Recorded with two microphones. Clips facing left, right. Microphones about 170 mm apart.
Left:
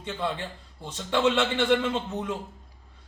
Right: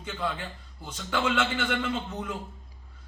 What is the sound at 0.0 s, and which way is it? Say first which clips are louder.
A man's voice: left 2 dB; 25° left (ahead or behind).